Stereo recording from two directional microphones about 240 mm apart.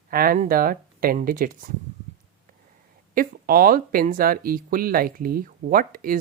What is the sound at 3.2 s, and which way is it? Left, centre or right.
Speech, right.